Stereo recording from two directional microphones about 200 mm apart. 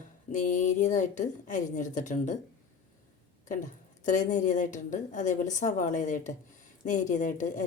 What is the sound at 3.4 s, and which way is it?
Speech, 40° left (ahead or behind).